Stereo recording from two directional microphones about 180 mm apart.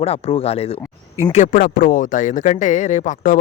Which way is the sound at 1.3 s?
45° left (ahead or behind).